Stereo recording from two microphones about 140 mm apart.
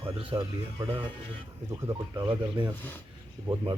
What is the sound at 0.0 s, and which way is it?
Music, 40° right (ahead or behind).